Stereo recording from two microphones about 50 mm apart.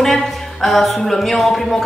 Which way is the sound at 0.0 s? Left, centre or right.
Centre.